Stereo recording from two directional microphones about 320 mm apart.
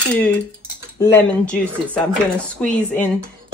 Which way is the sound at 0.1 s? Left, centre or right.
Centre.